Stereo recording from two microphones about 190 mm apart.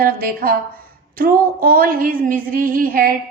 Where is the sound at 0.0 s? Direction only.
50° right (ahead or behind).